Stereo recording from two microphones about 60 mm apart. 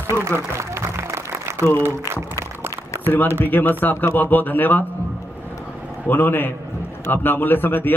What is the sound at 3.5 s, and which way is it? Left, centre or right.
A man's voice, left.